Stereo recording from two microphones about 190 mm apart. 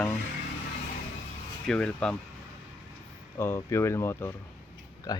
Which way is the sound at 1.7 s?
5° left (ahead or behind).